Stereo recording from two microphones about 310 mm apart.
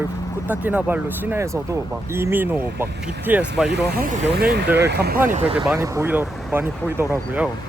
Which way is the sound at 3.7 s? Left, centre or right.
Right.